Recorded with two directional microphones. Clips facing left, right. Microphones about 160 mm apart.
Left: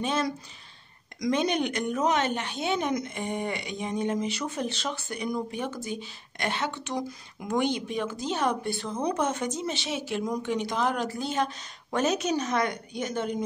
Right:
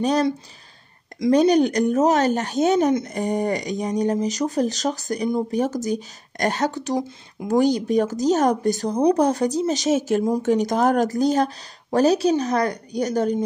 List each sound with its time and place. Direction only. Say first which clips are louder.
0.0 s speech: right 8 dB; 40° right (ahead or behind)
7.0 s speech: right 6 dB; 25° right (ahead or behind)
7.5 s speech: right 9 dB; 40° right (ahead or behind)